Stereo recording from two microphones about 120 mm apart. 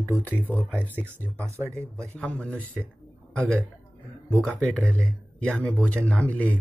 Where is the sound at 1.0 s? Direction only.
15° right (ahead or behind).